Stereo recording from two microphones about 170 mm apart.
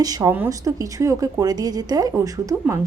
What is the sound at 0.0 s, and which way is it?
A woman's voice, 20° right (ahead or behind).